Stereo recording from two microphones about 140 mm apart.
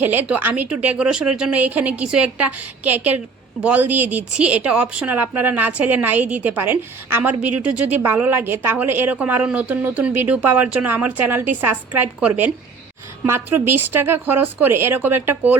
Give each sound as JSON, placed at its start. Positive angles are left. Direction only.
{"t": 0.0, "sound": "speech", "side_deg": -15}